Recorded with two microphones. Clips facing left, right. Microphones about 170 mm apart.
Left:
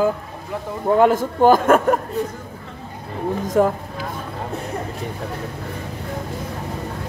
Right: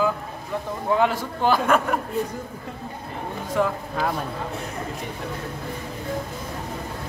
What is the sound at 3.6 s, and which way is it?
Speech, 40° left (ahead or behind).